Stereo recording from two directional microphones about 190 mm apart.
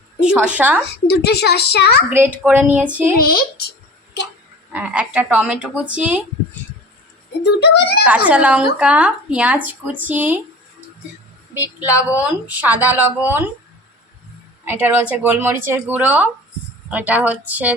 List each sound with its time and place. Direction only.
0.2 s speech: 5° right (ahead or behind)
1.0 s a woman's voice: 60° left (ahead or behind)
2.0 s speech: 10° right (ahead or behind)
3.2 s speech: 55° left (ahead or behind)
4.7 s speech: 5° right (ahead or behind)
7.4 s a woman's voice: 60° left (ahead or behind)
8.0 s speech: 5° right (ahead or behind)
12.2 s speech: 10° right (ahead or behind)
14.6 s speech: 10° right (ahead or behind)